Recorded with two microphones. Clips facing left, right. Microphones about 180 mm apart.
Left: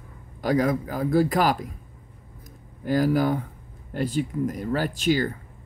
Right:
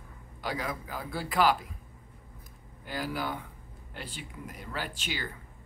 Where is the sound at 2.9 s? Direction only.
45° left (ahead or behind).